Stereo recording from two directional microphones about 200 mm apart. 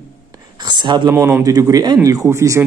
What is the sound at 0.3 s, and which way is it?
Whispering, 20° right (ahead or behind).